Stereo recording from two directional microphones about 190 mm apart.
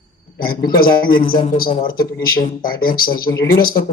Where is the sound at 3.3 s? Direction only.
15° left (ahead or behind).